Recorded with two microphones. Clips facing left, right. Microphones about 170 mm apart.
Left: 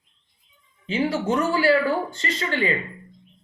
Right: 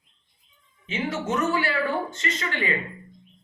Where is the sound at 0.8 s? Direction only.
30° left (ahead or behind).